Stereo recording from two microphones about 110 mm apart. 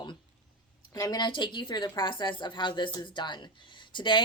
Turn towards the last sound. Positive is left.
turn(degrees=45)  # may be behind; listen again after turning